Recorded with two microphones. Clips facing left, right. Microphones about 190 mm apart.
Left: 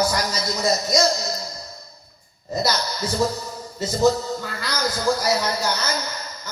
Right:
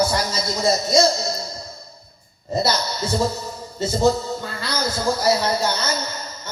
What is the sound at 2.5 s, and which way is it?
Speech, 30° right (ahead or behind).